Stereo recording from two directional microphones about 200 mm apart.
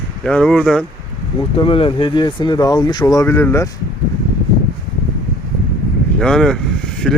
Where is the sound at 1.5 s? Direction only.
25° left (ahead or behind).